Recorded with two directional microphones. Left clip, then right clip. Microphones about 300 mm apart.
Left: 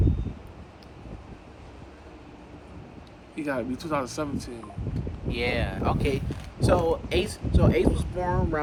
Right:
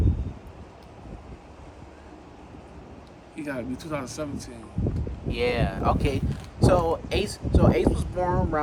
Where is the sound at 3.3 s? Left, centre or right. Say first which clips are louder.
Left 3 dB; centre.